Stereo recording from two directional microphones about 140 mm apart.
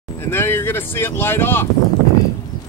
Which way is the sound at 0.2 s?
15° left (ahead or behind).